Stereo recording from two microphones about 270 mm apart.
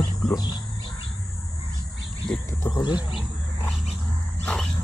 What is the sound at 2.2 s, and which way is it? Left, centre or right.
Speech, centre.